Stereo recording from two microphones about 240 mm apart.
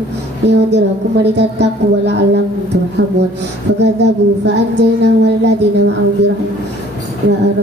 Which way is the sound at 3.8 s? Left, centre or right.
Right.